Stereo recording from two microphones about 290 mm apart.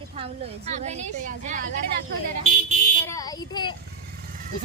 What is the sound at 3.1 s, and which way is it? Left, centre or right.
Speech, centre.